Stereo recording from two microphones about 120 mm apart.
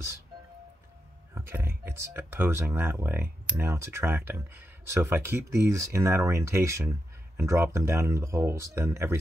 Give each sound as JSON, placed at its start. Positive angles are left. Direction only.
{"t": 1.3, "sound": "speech", "side_deg": -20}